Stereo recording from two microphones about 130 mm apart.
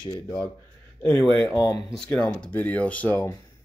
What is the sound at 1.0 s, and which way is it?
Speech, 10° left (ahead or behind).